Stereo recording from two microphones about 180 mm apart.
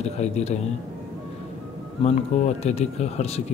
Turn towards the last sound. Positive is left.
turn(degrees=35)  # may be behind; listen again after turning